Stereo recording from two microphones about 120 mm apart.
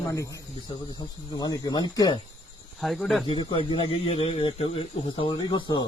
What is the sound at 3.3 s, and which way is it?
Speech, 45° left (ahead or behind).